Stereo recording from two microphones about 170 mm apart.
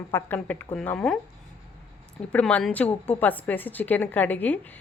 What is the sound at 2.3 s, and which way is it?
Speech, 10° left (ahead or behind).